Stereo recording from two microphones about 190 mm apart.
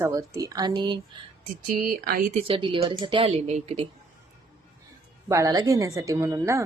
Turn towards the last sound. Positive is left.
turn(degrees=-15)  # may be behind; listen again after turning